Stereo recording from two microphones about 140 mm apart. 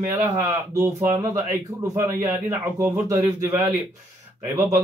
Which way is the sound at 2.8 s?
20° right (ahead or behind).